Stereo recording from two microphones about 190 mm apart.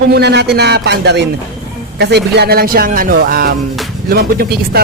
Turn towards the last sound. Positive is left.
turn(degrees=-55)  # may be behind; listen again after turning